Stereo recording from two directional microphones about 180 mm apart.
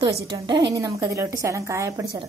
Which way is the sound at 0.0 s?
25° right (ahead or behind).